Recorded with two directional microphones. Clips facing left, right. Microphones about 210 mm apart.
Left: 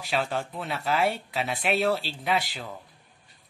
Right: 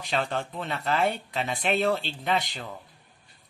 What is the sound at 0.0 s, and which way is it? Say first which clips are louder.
Speech: even; 5° left (ahead or behind).